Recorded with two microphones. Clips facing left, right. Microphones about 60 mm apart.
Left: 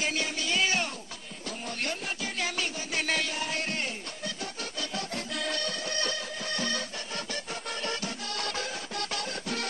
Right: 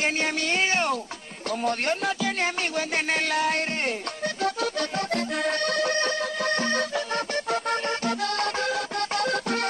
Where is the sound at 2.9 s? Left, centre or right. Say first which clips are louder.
Right 4 dB; right.